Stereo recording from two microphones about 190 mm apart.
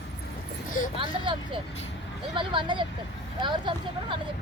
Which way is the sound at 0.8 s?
45° left (ahead or behind).